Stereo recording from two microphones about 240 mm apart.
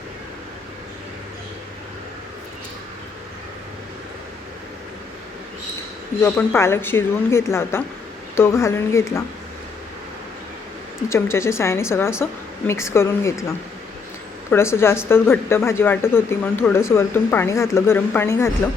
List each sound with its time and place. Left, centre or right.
6.2 s speech: centre
11.1 s speech: centre
14.5 s speech: centre